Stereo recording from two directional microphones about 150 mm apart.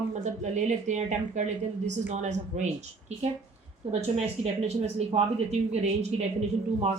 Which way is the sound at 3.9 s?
45° right (ahead or behind).